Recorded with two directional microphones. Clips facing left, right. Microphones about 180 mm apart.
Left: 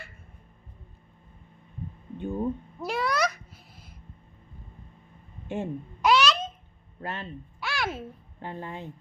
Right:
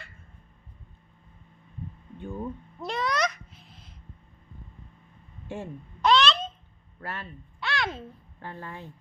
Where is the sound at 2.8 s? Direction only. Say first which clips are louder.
Even; 5° left (ahead or behind).